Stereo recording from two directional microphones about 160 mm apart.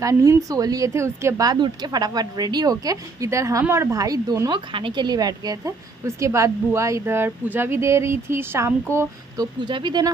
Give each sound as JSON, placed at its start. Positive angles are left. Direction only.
{"t": 0.0, "sound": "speech", "side_deg": -20}
{"t": 8.9, "sound": "speech", "side_deg": -25}